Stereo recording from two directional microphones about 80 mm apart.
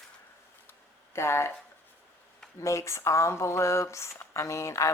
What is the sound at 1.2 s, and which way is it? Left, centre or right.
Speech, left.